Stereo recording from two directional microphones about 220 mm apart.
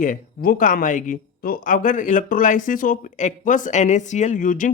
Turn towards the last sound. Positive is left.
turn(degrees=35)  # may be behind; listen again after turning